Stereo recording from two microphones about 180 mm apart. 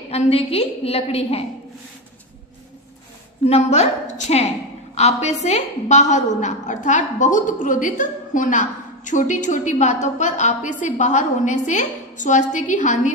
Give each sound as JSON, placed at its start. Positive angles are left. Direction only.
{"t": 0.1, "sound": "a woman's voice", "side_deg": 35}
{"t": 3.4, "sound": "a woman's voice", "side_deg": 35}